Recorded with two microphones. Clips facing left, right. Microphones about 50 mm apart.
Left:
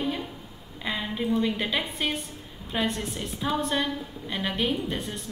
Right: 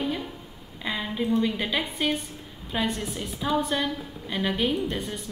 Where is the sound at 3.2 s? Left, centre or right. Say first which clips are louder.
Right 2 dB; centre.